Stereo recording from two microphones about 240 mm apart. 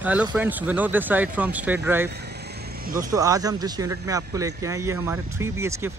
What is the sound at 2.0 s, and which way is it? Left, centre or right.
Vehicle, right.